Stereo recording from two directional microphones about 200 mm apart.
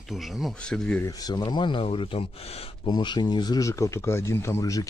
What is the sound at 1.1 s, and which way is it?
Speech, 20° left (ahead or behind).